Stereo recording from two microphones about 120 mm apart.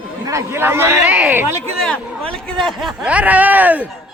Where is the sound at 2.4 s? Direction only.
Centre (ahead or behind).